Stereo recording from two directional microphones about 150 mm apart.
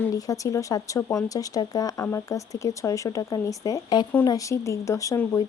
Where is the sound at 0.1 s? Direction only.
20° left (ahead or behind).